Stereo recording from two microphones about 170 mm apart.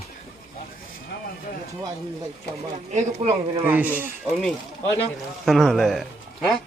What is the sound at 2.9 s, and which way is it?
Speech, 45° right (ahead or behind).